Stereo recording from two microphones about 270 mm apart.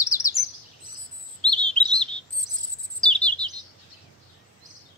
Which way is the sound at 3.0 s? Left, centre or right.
Centre.